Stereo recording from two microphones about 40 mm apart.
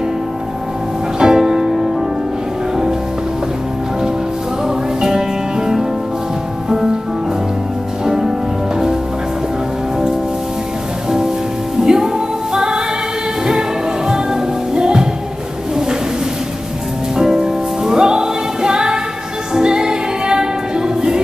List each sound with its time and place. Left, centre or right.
1.2 s music: centre
4.6 s music: centre
8.0 s music: centre
11.1 s music: centre
17.1 s music: centre